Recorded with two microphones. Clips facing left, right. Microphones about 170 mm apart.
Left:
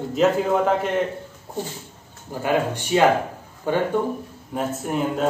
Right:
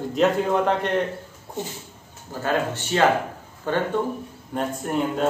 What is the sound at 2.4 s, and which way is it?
A man's voice, 15° left (ahead or behind).